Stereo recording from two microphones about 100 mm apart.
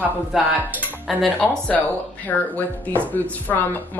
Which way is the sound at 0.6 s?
20° right (ahead or behind).